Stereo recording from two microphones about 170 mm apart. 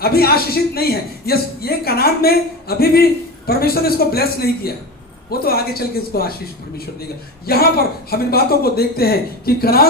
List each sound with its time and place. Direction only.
0.0 s a man's voice: 65° left (ahead or behind)
7.4 s a man's voice: 65° left (ahead or behind)